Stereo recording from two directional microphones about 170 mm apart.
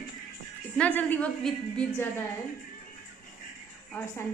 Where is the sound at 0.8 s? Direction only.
10° left (ahead or behind).